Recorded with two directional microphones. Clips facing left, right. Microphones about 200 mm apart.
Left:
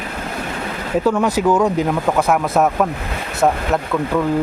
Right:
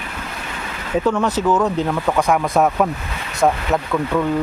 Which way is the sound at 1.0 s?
10° left (ahead or behind).